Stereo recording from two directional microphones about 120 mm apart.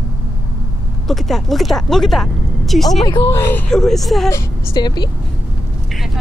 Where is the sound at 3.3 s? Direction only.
20° left (ahead or behind).